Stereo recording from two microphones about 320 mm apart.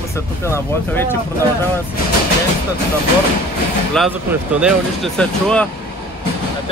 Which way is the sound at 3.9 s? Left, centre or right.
Centre.